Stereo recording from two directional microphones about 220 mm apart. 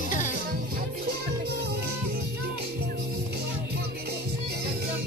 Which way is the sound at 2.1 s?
45° right (ahead or behind).